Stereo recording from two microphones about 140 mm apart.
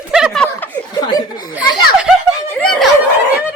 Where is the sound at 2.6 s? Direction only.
Centre (ahead or behind).